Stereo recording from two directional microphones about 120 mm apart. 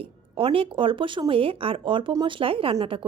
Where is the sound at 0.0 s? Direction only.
50° right (ahead or behind).